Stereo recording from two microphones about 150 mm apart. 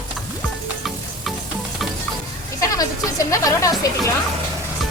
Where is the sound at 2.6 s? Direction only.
25° left (ahead or behind).